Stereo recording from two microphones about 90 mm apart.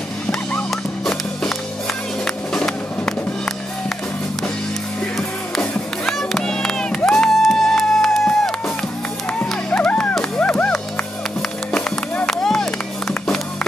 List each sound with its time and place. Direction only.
0.3 s music: 5° left (ahead or behind)
5.6 s music: 5° left (ahead or behind)
12.3 s clapping: 5° left (ahead or behind)